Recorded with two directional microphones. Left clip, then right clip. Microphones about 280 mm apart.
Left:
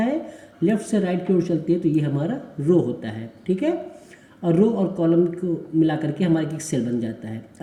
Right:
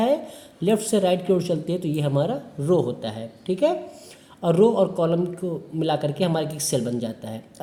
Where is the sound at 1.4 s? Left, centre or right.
Right.